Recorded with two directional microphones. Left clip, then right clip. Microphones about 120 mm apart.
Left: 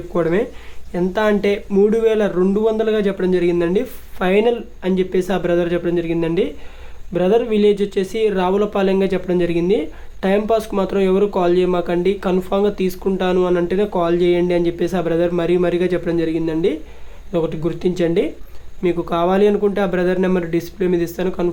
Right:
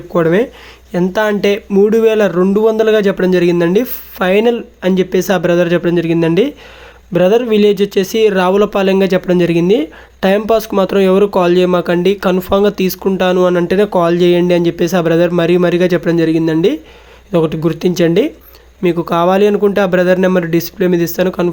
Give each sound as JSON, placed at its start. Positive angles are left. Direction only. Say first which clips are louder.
{"t": 0.1, "sound": "speech", "louder": "right 6 dB", "side_deg": -40}
{"t": 1.7, "sound": "speech", "louder": "right 5 dB", "side_deg": -30}